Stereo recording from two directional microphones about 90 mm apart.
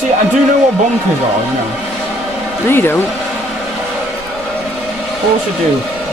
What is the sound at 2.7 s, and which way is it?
Speech, 25° left (ahead or behind).